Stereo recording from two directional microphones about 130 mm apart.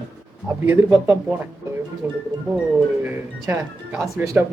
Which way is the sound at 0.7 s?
20° right (ahead or behind).